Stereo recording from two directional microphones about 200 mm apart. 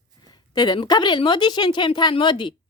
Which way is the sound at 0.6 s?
20° left (ahead or behind).